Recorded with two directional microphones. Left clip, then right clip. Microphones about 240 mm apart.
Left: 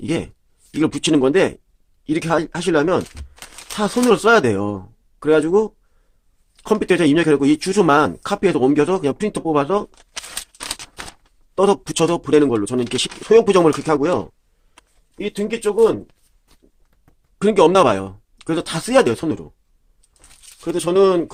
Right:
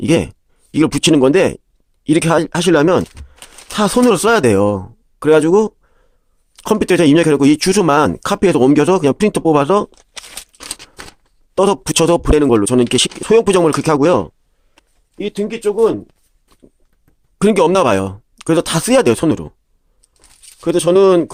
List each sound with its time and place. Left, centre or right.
0.0 s speech: right
11.5 s speech: right
15.2 s speech: right
17.3 s speech: right
20.7 s speech: right